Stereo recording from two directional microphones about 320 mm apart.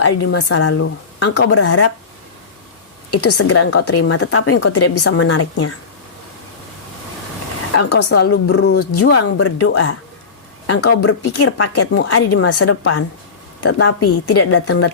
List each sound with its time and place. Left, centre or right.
0.3 s a woman's voice: left
3.1 s a woman's voice: left
7.7 s a woman's voice: left
11.0 s a woman's voice: left